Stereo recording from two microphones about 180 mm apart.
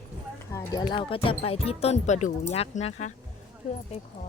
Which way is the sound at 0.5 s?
15° left (ahead or behind).